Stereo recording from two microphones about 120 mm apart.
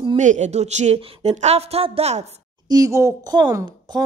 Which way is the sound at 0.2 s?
85° right.